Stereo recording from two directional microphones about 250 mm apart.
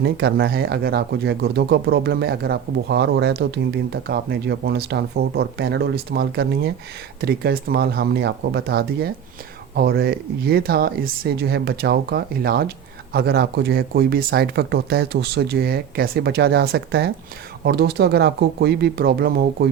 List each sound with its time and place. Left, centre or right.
0.0 s speech: right